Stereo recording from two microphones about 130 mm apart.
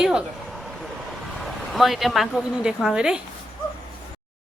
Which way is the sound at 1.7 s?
Centre (ahead or behind).